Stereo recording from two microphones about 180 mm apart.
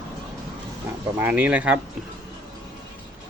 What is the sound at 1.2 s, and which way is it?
Speech, 10° right (ahead or behind).